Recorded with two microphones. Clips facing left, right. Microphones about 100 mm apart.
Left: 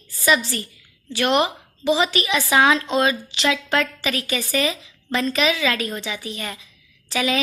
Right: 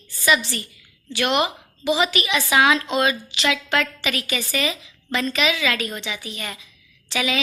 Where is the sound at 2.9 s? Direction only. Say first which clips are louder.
Left 1 dB; 30° left (ahead or behind).